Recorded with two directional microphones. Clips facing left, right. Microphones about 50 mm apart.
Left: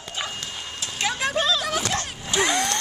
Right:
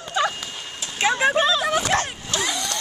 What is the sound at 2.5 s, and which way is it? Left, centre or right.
Vehicle, left.